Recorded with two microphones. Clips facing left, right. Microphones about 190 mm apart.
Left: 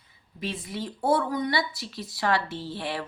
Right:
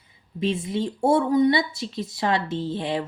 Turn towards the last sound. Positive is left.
turn(degrees=-20)  # may be behind; listen again after turning